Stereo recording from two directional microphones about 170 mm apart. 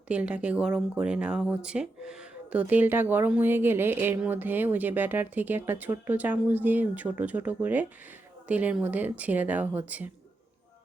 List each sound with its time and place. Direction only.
0.1 s speech: 5° right (ahead or behind)